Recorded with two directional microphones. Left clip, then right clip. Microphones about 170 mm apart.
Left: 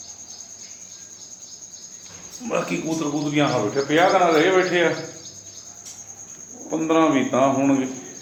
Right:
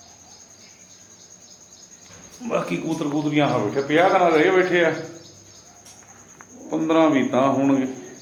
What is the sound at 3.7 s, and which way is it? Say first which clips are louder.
A man's voice: even; 15° right (ahead or behind).